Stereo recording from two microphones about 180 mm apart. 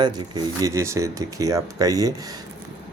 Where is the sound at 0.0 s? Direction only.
25° right (ahead or behind).